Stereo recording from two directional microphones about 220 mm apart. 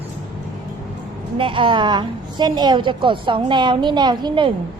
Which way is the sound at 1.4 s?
20° right (ahead or behind).